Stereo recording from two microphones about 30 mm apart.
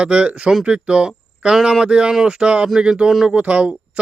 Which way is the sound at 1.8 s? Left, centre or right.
Right.